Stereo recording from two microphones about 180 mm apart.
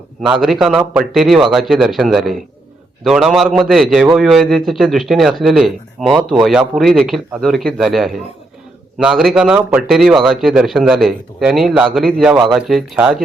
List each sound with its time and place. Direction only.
0.2 s a man's voice: centre (ahead or behind)